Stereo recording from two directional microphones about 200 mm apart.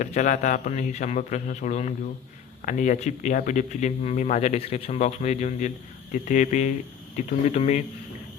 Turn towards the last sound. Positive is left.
turn(degrees=35)  # may be behind; listen again after turning